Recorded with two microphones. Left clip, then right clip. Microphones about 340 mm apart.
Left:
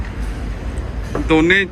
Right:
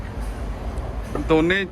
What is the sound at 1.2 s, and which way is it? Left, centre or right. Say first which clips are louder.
Speech: left 5 dB; centre.